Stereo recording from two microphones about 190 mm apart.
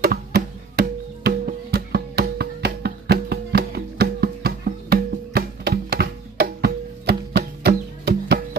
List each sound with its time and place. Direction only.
0.0 s music: 50° right (ahead or behind)